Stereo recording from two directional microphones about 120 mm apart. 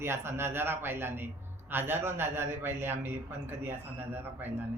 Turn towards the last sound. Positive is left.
turn(degrees=-15)  # may be behind; listen again after turning